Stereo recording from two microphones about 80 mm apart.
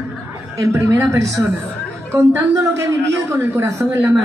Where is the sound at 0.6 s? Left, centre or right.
Right.